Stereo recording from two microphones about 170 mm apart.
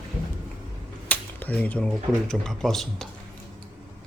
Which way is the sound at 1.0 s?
10° left (ahead or behind).